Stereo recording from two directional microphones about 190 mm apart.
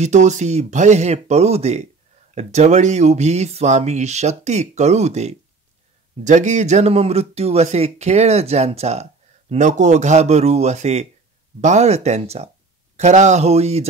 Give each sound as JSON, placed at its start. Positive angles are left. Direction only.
{"t": 0.0, "sound": "speech", "side_deg": -40}